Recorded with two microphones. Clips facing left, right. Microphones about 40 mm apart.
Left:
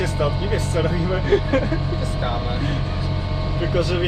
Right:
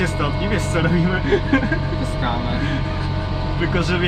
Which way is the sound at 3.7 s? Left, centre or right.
Right.